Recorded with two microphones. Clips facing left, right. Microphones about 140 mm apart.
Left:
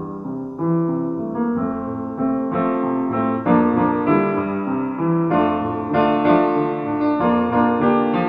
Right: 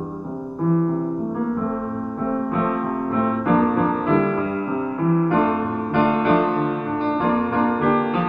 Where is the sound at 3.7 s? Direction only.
65° left (ahead or behind).